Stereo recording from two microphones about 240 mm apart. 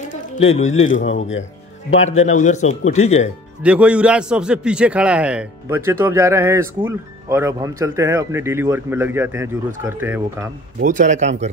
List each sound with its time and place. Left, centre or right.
0.1 s speech: left
1.0 s speech: left
2.0 s speech: left
3.6 s a man's voice: centre
10.8 s speech: right